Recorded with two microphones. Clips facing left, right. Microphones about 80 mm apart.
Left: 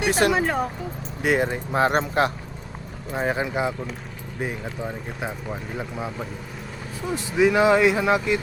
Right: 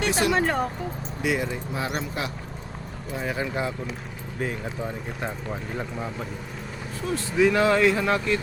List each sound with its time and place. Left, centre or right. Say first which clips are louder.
0.1 s speech: left 5 dB; left
0.3 s speech: even; centre
1.2 s speech: left 4 dB; left
3.3 s speech: left 3 dB; centre
4.8 s speech: left 1 dB; centre